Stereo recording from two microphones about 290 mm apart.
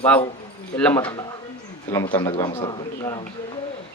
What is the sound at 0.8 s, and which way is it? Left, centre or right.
Speech, centre.